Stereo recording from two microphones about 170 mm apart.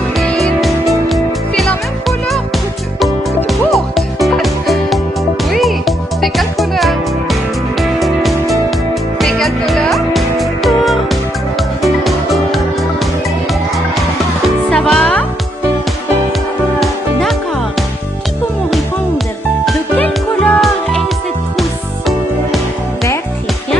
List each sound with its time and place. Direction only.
0.2 s music: centre (ahead or behind)
3.4 s music: centre (ahead or behind)
14.7 s music: centre (ahead or behind)
16.8 s music: centre (ahead or behind)
19.6 s music: 5° left (ahead or behind)